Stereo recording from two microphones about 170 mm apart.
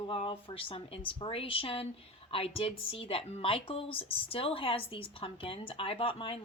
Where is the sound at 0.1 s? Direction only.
30° left (ahead or behind).